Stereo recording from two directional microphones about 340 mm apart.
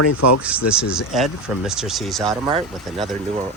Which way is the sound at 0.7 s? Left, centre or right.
Centre.